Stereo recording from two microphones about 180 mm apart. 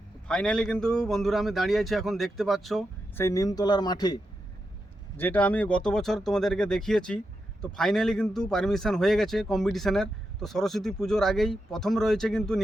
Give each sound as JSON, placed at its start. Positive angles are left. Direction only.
{"t": 0.3, "sound": "speech", "side_deg": 5}
{"t": 3.2, "sound": "speech", "side_deg": 15}
{"t": 5.1, "sound": "speech", "side_deg": 10}